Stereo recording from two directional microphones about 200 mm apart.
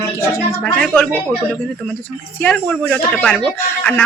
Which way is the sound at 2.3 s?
5° left (ahead or behind).